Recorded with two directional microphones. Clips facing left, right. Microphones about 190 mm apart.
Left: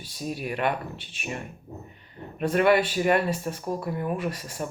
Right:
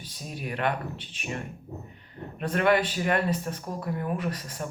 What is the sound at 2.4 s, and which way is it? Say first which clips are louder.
Speech: left 3 dB; 10° left (ahead or behind).